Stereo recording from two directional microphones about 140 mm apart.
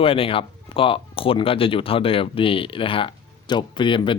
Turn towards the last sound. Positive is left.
turn(degrees=35)  # may be behind; listen again after turning